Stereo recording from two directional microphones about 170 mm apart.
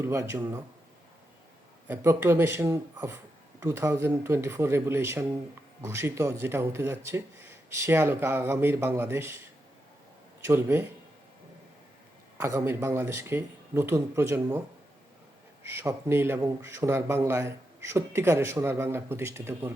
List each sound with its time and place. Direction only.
0.0 s a man's voice: 15° right (ahead or behind)
1.9 s a man's voice: 15° right (ahead or behind)
12.4 s a man's voice: 15° right (ahead or behind)
15.6 s a man's voice: 15° right (ahead or behind)